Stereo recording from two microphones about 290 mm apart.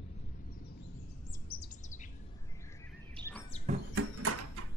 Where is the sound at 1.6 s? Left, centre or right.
Left.